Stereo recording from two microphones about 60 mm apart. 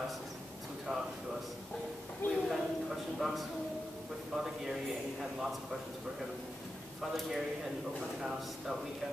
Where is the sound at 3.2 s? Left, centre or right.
Centre.